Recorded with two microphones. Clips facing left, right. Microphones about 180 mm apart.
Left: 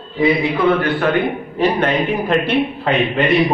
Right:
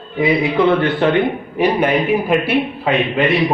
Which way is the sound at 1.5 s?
10° right (ahead or behind).